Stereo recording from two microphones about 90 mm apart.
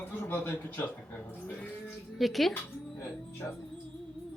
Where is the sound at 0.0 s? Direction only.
25° left (ahead or behind).